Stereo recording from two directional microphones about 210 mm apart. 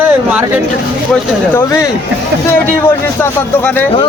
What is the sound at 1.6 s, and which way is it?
Speech, 15° left (ahead or behind).